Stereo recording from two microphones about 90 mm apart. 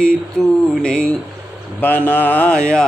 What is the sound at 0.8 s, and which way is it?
Mantra, 10° left (ahead or behind).